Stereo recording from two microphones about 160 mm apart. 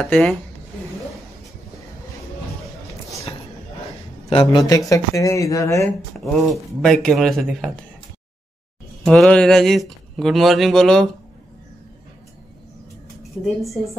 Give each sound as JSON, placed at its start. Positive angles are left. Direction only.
{"t": 0.1, "sound": "speech", "side_deg": 5}
{"t": 4.3, "sound": "speech", "side_deg": 30}
{"t": 6.1, "sound": "speech", "side_deg": 0}
{"t": 9.0, "sound": "speech", "side_deg": 5}
{"t": 13.2, "sound": "a woman's voice", "side_deg": 0}